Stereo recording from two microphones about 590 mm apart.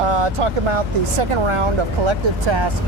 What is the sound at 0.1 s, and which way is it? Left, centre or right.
Speech, right.